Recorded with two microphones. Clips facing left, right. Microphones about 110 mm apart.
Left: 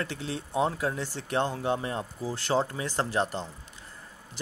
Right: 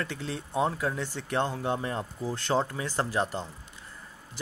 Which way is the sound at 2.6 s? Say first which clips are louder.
Even; 30° left (ahead or behind).